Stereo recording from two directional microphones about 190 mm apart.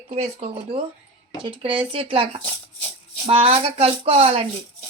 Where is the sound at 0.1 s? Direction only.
35° right (ahead or behind).